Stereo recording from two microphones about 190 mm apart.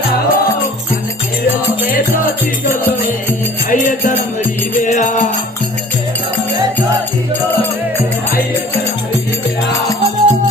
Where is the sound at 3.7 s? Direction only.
45° left (ahead or behind).